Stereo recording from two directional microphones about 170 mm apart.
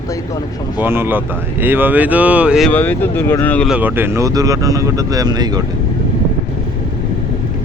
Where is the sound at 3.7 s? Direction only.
10° right (ahead or behind).